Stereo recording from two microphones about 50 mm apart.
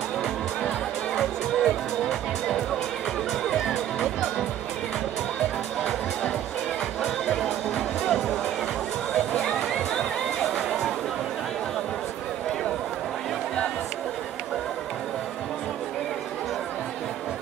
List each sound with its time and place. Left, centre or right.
0.2 s music: centre
3.4 s music: centre
3.7 s music: centre
7.4 s music: centre
9.4 s music: centre